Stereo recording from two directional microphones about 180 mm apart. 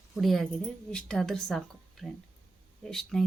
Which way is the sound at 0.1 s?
Centre (ahead or behind).